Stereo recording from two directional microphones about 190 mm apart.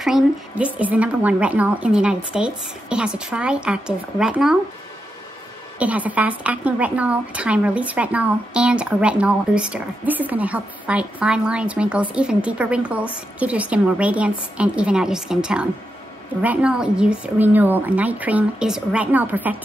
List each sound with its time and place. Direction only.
0.0 s a woman's voice: 5° right (ahead or behind)
5.8 s a woman's voice: 10° right (ahead or behind)